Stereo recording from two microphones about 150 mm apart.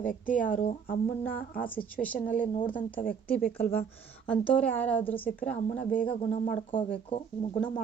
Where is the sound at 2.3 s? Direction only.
65° left (ahead or behind).